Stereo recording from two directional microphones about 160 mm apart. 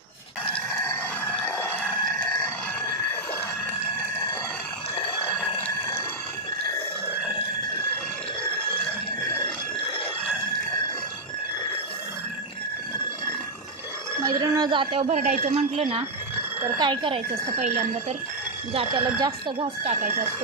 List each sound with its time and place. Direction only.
0.4 s chicken: 10° left (ahead or behind)
1.9 s crowing: centre (ahead or behind)
5.3 s a sound: 5° left (ahead or behind)
14.2 s a woman's voice: 20° right (ahead or behind); by 16.0 s 40° right (ahead or behind)
16.7 s speech: 25° right (ahead or behind)
17.6 s speech: 45° right (ahead or behind)
18.7 s a woman's voice: 35° right (ahead or behind)
19.8 s speech: 45° right (ahead or behind)